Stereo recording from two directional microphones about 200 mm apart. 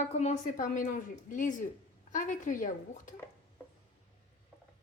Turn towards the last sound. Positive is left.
turn(degrees=40)  # may be behind; listen again after turning